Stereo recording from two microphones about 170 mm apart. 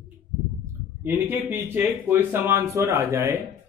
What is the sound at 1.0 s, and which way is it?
Speech, 15° right (ahead or behind).